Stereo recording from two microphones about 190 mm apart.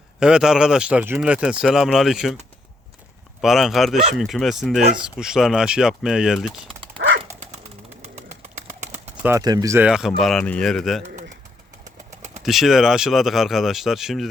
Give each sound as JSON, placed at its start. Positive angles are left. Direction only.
{"t": 0.2, "sound": "speech", "side_deg": -5}
{"t": 3.4, "sound": "speech", "side_deg": 0}
{"t": 7.0, "sound": "dog", "side_deg": -65}
{"t": 8.0, "sound": "bird", "side_deg": -35}
{"t": 8.8, "sound": "speech", "side_deg": -15}
{"t": 11.9, "sound": "a sound", "side_deg": -40}
{"t": 12.4, "sound": "speech", "side_deg": 0}